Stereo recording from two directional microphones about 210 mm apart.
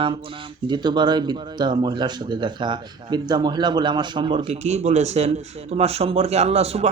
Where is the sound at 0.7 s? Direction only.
20° right (ahead or behind).